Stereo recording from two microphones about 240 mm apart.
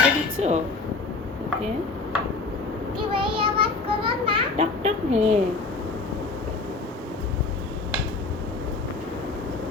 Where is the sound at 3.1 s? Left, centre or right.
Right.